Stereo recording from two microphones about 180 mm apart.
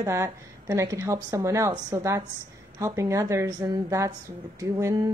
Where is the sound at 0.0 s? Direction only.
15° right (ahead or behind).